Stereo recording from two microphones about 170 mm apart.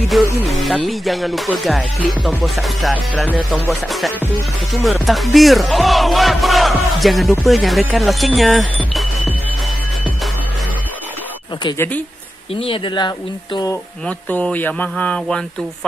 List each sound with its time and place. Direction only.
0.1 s music: centre (ahead or behind)
4.8 s music: centre (ahead or behind)
12.5 s speech: 30° left (ahead or behind)
14.0 s speech: 10° left (ahead or behind)